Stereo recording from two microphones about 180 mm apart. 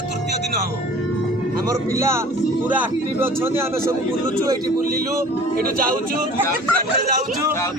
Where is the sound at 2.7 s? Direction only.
10° right (ahead or behind).